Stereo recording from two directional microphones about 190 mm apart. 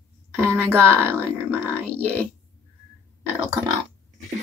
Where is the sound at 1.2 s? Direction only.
10° left (ahead or behind).